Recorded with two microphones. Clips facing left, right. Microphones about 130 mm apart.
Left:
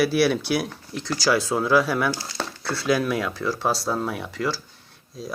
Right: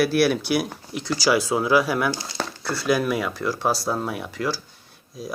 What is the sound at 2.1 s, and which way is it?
Speech, 20° right (ahead or behind).